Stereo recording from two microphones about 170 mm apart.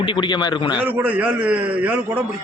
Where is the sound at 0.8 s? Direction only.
10° right (ahead or behind).